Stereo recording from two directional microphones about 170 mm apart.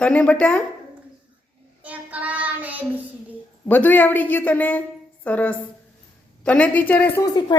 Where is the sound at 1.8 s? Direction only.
10° right (ahead or behind).